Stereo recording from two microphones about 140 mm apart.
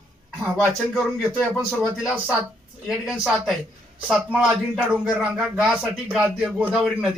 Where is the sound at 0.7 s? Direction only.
Centre (ahead or behind).